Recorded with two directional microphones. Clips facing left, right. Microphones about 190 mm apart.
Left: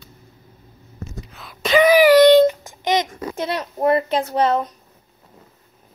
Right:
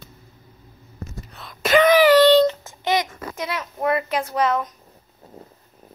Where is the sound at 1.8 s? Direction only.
10° left (ahead or behind); by 4.8 s 30° left (ahead or behind).